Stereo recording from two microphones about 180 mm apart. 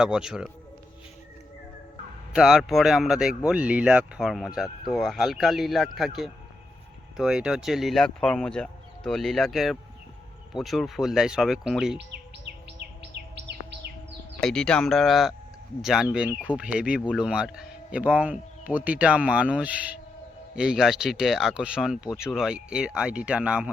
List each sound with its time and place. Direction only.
0.0 s speech: 5° right (ahead or behind)
2.3 s speech: 5° right (ahead or behind)
13.3 s bird: 70° right (ahead or behind)
14.4 s speech: 5° left (ahead or behind)